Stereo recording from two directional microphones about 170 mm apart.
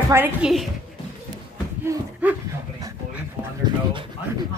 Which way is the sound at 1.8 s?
15° right (ahead or behind).